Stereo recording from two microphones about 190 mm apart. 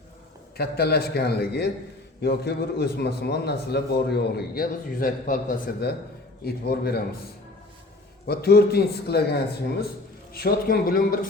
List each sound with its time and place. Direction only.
0.5 s a man's voice: 55° left (ahead or behind)
8.3 s a man's voice: 55° left (ahead or behind)